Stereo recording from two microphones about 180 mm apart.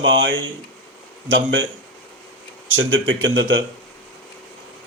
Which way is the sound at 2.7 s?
90° right.